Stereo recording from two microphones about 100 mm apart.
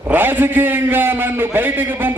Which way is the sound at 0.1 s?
20° right (ahead or behind).